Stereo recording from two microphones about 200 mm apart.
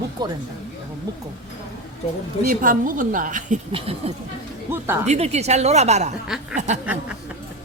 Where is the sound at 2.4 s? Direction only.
45° right (ahead or behind).